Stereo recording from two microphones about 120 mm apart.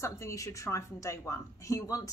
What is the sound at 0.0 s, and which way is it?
Speech, 25° left (ahead or behind).